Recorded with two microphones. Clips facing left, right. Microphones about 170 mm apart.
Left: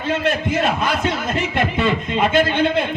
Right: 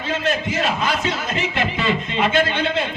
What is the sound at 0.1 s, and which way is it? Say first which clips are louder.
Speech: left 3 dB; 55° left (ahead or behind).